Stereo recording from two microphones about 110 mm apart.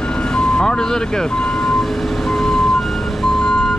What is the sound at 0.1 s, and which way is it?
Vehicle, 5° left (ahead or behind).